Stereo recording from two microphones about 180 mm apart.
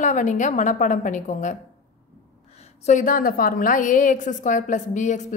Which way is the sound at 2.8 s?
45° left (ahead or behind).